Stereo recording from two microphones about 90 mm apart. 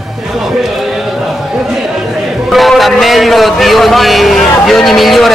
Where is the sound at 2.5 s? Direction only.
Centre (ahead or behind).